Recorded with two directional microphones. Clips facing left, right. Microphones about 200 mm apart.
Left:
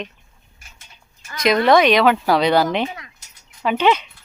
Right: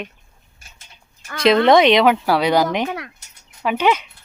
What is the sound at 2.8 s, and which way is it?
Speech, 60° right (ahead or behind).